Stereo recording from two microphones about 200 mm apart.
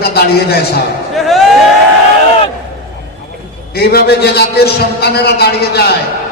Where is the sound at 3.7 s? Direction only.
50° left (ahead or behind).